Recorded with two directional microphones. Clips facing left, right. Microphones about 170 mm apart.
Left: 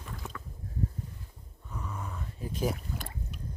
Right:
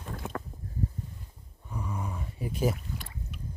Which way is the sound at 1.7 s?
10° right (ahead or behind).